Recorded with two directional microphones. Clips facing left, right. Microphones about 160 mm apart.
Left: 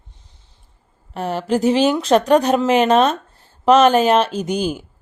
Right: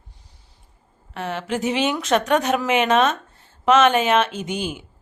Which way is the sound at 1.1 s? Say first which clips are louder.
Left 6 dB; 35° left (ahead or behind).